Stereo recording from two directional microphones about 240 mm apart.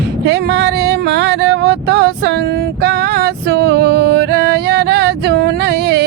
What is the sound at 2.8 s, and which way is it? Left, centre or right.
Music, right.